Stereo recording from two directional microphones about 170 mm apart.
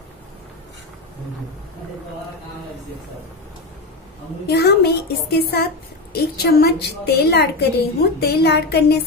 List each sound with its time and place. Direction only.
4.5 s a woman's voice: 70° left (ahead or behind)